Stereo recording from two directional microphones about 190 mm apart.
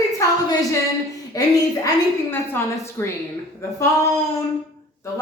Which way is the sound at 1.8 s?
15° left (ahead or behind).